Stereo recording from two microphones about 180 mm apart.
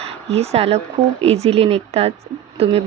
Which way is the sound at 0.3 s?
35° right (ahead or behind).